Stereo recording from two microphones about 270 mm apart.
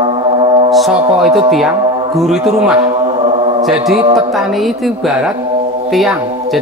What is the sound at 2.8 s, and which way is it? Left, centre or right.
Music, right.